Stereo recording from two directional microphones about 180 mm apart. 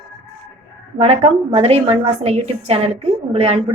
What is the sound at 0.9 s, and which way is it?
A woman's voice, 35° right (ahead or behind).